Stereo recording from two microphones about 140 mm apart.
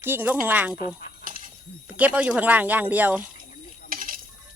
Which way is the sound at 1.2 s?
70° right (ahead or behind).